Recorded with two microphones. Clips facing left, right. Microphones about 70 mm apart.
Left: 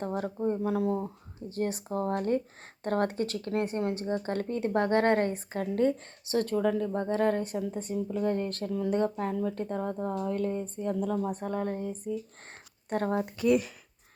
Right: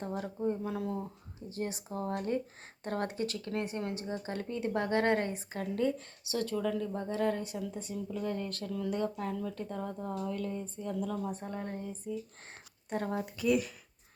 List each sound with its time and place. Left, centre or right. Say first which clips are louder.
0.0 s speech: left 4 dB; left